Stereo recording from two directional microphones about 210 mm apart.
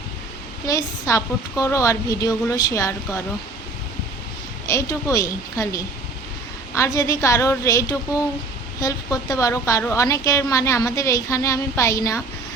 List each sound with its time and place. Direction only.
0.7 s a woman's voice: 15° left (ahead or behind)
4.6 s a woman's voice: 15° left (ahead or behind)